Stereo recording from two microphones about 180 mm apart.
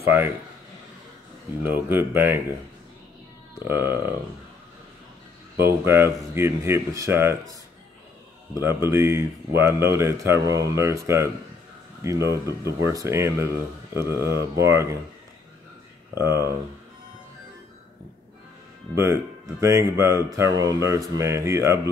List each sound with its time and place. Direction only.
1.7 s speech: 10° right (ahead or behind)
3.5 s speech: 15° right (ahead or behind)
5.6 s speech: 15° right (ahead or behind)
8.5 s speech: 15° right (ahead or behind)
16.2 s speech: 15° right (ahead or behind)
18.9 s speech: 15° right (ahead or behind)